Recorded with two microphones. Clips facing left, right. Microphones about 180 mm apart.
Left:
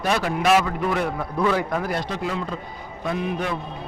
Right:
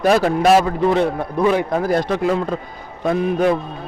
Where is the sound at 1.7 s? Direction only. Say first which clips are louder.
Right 7 dB; 40° right (ahead or behind).